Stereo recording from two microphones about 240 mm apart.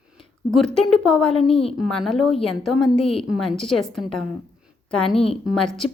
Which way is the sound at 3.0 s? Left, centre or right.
Left.